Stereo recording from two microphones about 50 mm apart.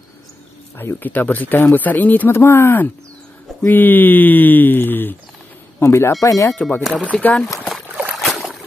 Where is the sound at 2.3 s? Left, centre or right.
Left.